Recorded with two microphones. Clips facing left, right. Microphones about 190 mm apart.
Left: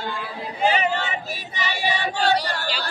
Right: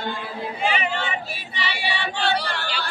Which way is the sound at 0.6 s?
40° left (ahead or behind).